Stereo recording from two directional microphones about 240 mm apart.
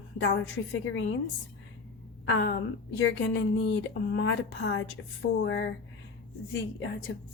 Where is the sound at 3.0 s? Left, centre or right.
Left.